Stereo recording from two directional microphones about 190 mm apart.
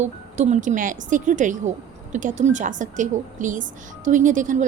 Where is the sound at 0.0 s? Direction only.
40° right (ahead or behind).